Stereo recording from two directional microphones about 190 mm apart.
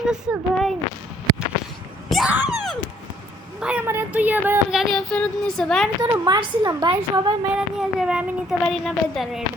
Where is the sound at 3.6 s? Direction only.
10° right (ahead or behind).